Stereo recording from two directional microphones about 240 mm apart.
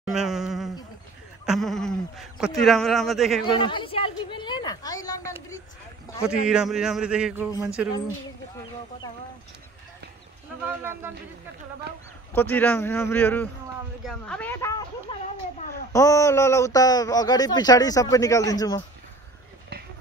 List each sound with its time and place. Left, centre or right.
0.0 s a sound: centre
1.4 s speech: centre
3.5 s a woman's voice: left
6.2 s speech: centre
10.8 s speech: centre
12.4 s speech: centre